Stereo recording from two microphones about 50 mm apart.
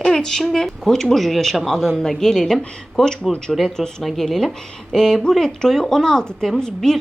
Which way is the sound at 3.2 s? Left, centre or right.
Left.